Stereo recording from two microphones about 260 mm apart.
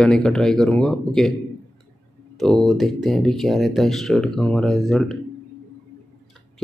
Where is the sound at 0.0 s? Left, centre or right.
Centre.